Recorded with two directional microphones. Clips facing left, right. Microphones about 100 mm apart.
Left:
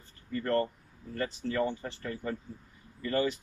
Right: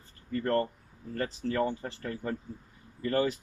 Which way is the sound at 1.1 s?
40° right (ahead or behind).